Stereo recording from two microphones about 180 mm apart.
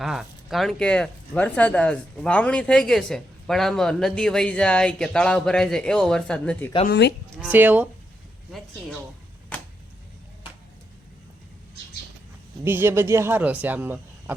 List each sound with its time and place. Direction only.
0.0 s speech: centre (ahead or behind)
6.8 s speech: 70° left (ahead or behind)
7.4 s speech: 10° right (ahead or behind)
12.6 s speech: 15° right (ahead or behind)